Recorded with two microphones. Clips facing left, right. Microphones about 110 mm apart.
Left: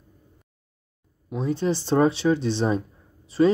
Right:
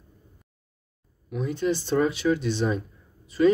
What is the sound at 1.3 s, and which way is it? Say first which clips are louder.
Speech: left 2 dB; 30° left (ahead or behind).